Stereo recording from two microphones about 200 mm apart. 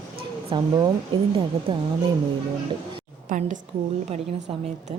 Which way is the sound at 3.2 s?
40° right (ahead or behind).